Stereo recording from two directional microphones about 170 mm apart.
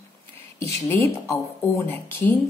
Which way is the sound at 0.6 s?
15° left (ahead or behind).